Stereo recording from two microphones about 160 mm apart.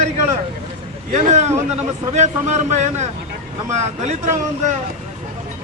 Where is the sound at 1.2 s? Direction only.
45° right (ahead or behind).